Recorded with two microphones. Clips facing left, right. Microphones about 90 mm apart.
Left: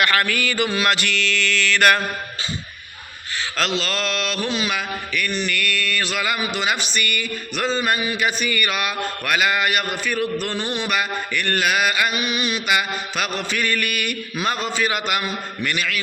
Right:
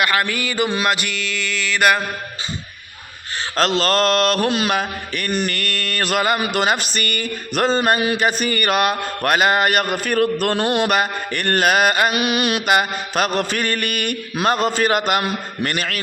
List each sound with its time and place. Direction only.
0.0 s mantra: 20° right (ahead or behind)
3.6 s mantra: 45° right (ahead or behind)